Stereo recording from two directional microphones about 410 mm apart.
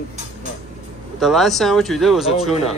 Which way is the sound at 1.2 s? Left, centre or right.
Centre.